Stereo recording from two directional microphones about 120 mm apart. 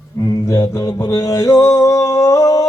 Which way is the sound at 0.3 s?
30° left (ahead or behind).